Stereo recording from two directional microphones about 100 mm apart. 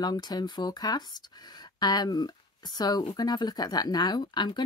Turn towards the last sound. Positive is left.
turn(degrees=50)  # may be behind; listen again after turning